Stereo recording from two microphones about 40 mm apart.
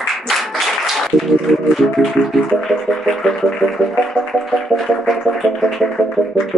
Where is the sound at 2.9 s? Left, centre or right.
Left.